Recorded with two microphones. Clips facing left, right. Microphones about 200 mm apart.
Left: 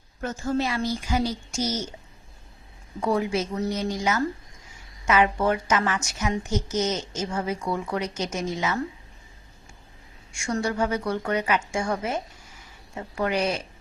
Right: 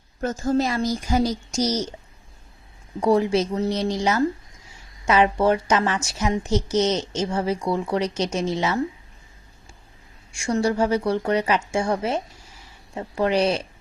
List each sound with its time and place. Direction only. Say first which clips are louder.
0.2 s a woman's voice: right 4 dB; 40° right (ahead or behind)
3.0 s a woman's voice: right 5 dB; 35° right (ahead or behind)
10.4 s a woman's voice: right 4 dB; 30° right (ahead or behind)